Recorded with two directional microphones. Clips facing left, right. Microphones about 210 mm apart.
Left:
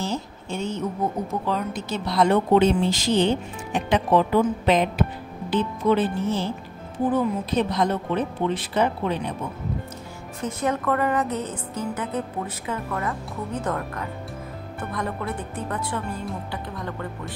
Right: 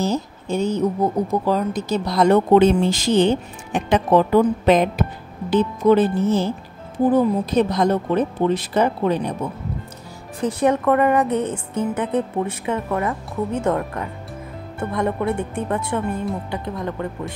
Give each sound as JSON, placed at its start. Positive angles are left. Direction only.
{"t": 0.0, "sound": "speech", "side_deg": -40}
{"t": 10.4, "sound": "speech", "side_deg": -30}